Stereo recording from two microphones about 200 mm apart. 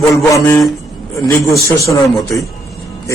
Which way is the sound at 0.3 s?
15° left (ahead or behind).